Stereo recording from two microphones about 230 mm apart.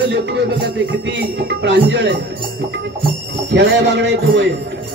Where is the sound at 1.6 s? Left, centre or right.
Right.